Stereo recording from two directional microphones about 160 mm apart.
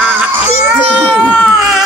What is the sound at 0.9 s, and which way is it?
Baby cry, 5° left (ahead or behind).